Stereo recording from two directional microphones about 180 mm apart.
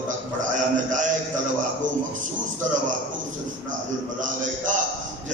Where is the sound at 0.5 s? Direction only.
45° right (ahead or behind).